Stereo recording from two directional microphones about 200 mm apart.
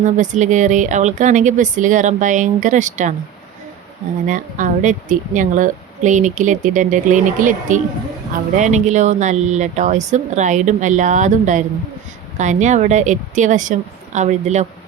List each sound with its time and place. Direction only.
0.0 s speech: 40° right (ahead or behind)
4.3 s speech: 40° right (ahead or behind)